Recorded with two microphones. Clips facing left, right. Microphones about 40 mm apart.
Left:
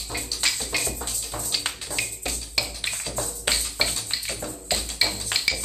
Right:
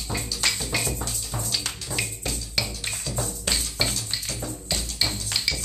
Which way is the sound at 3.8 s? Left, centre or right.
Centre.